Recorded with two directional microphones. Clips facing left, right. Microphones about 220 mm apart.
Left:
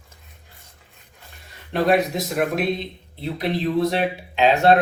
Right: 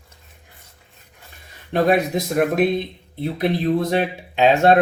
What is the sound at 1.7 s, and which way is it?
Speech, 50° right (ahead or behind).